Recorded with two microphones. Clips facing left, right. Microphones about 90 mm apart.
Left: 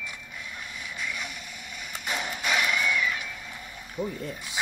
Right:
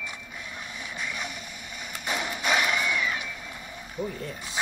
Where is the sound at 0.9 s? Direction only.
30° right (ahead or behind).